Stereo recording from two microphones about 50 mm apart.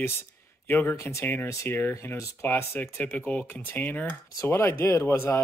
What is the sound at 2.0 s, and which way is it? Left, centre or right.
Speech, left.